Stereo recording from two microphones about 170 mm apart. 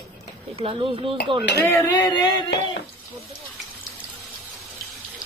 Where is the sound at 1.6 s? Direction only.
15° left (ahead or behind).